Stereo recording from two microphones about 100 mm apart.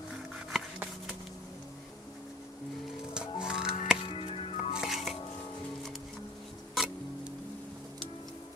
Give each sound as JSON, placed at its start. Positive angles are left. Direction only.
{"t": 3.2, "sound": "music", "side_deg": -5}
{"t": 4.0, "sound": "music", "side_deg": 65}
{"t": 4.7, "sound": "music", "side_deg": 0}
{"t": 6.7, "sound": "music", "side_deg": 0}